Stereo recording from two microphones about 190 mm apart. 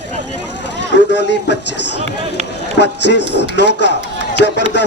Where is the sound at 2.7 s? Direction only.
65° left (ahead or behind).